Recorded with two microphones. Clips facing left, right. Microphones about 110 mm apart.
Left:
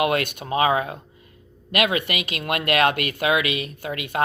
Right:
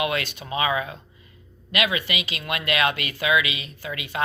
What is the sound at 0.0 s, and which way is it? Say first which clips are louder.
Speech: left 4 dB; 55° left (ahead or behind).